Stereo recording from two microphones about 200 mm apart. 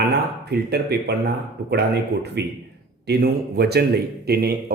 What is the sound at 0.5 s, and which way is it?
A man's voice, 55° right (ahead or behind).